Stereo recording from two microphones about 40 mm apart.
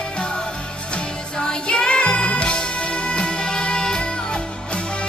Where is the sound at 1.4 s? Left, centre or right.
Left.